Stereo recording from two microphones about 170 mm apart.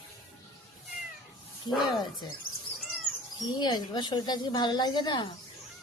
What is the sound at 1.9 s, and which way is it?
Speech, 25° left (ahead or behind).